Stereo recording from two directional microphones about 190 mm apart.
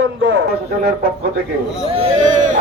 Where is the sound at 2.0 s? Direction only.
30° right (ahead or behind).